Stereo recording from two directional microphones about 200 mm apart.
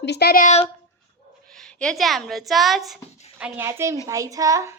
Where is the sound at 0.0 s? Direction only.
55° left (ahead or behind).